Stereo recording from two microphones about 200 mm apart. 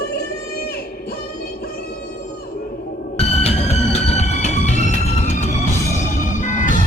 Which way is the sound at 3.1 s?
30° left (ahead or behind).